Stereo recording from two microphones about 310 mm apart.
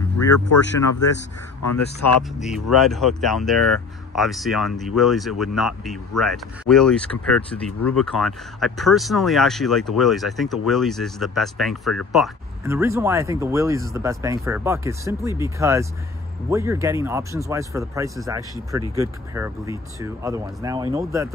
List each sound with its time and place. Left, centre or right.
1.7 s speech: left
2.4 s speech: centre